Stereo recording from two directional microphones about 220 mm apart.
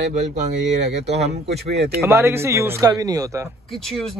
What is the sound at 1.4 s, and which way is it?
Speech, 45° right (ahead or behind).